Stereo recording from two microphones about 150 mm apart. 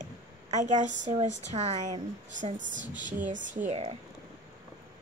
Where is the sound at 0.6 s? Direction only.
55° right (ahead or behind).